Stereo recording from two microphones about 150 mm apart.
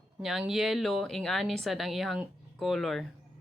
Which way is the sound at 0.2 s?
Centre (ahead or behind).